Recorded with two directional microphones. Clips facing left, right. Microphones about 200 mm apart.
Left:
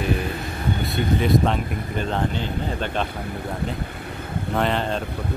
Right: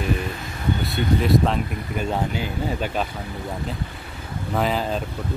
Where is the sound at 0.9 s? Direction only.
Centre (ahead or behind).